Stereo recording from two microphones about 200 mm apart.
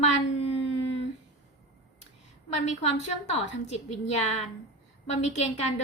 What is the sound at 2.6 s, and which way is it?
A woman's voice, 35° left (ahead or behind).